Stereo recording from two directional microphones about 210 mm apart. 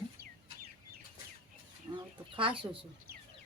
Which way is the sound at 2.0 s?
25° right (ahead or behind).